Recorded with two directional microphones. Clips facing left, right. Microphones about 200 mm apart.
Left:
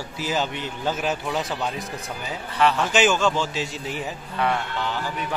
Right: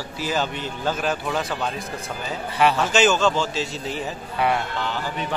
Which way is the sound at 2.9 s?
15° left (ahead or behind).